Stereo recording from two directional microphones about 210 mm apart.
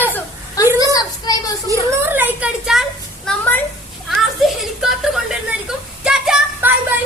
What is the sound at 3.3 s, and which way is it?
Speech, 10° left (ahead or behind).